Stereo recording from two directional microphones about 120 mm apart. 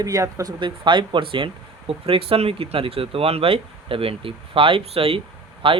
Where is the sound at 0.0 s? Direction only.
25° right (ahead or behind).